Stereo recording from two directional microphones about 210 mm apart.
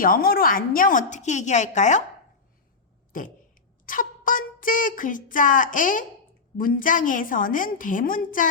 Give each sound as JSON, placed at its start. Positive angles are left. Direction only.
{"t": 0.0, "sound": "speech", "side_deg": 45}
{"t": 3.1, "sound": "a sound", "side_deg": 40}
{"t": 6.6, "sound": "speech", "side_deg": 40}